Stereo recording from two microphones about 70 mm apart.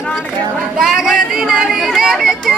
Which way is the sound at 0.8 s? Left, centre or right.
Centre.